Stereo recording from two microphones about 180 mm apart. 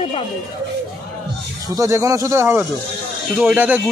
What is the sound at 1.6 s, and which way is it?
Speech, 15° right (ahead or behind).